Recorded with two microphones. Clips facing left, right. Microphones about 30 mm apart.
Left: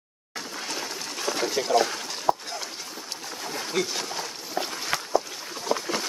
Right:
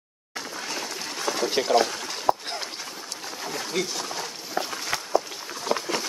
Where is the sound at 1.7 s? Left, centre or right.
Right.